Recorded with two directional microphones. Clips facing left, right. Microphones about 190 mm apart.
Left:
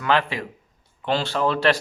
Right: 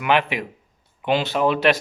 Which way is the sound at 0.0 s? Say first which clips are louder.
Right 2 dB; 20° right (ahead or behind).